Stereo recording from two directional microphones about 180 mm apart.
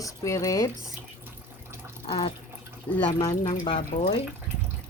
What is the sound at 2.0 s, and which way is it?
Speech, 30° left (ahead or behind).